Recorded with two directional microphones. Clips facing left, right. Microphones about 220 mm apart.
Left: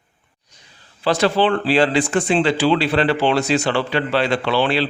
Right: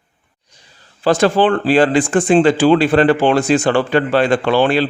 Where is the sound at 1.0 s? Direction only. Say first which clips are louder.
Right 4 dB; 45° right (ahead or behind).